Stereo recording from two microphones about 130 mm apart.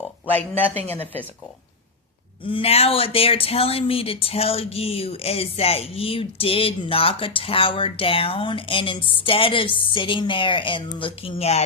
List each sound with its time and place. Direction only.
0.3 s speech: 15° left (ahead or behind)
0.7 s speech: 55° right (ahead or behind)
2.4 s speech: 45° left (ahead or behind)